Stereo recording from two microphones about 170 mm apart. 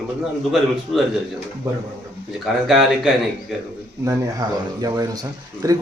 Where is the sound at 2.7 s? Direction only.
Centre (ahead or behind).